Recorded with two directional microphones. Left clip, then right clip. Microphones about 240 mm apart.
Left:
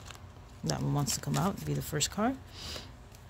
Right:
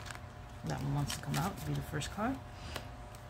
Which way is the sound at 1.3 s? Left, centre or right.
Left.